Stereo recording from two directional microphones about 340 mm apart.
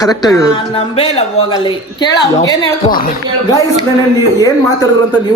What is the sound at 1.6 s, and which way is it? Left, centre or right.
A woman's voice, centre.